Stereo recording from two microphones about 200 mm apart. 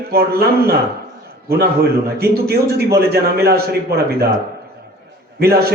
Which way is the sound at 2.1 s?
50° right (ahead or behind).